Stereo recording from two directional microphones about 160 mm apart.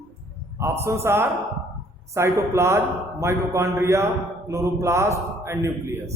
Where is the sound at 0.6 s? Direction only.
15° right (ahead or behind).